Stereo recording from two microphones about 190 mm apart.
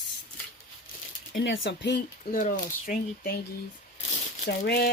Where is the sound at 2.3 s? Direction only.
45° left (ahead or behind).